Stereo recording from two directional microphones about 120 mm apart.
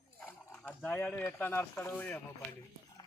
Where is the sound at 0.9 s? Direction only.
15° left (ahead or behind).